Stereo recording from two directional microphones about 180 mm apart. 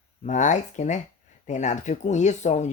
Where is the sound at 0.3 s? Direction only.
45° left (ahead or behind).